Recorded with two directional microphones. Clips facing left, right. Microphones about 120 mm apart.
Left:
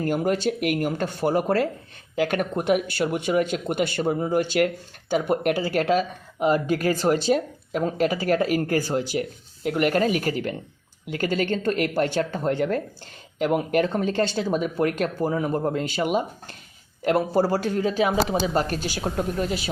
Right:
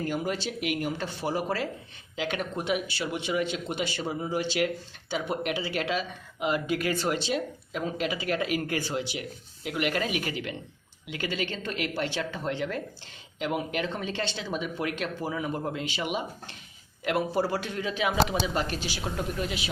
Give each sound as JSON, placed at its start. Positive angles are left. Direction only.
{"t": 0.0, "sound": "speech", "side_deg": 50}